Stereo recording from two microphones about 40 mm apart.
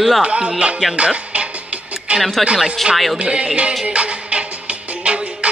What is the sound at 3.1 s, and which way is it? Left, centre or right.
Music, right.